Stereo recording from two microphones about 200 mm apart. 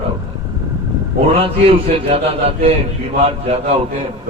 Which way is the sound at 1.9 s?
30° right (ahead or behind).